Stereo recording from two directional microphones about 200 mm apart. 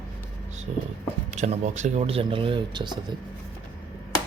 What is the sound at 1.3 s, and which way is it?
Speech, 35° right (ahead or behind).